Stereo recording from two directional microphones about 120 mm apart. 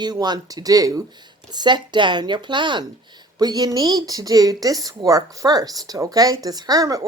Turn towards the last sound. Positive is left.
turn(degrees=-30)  # may be behind; listen again after turning